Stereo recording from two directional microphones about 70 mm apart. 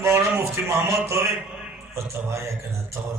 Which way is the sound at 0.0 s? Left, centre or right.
Right.